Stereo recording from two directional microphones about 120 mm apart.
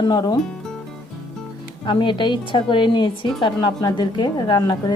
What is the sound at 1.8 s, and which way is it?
A woman's voice, 40° left (ahead or behind).